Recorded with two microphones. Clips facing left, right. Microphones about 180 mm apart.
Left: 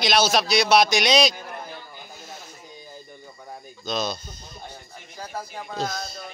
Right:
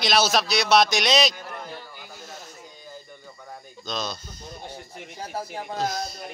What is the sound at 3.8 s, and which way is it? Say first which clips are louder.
Speech: left 4 dB; 10° left (ahead or behind).